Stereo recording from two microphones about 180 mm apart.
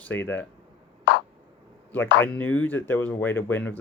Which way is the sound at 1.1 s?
75° left (ahead or behind).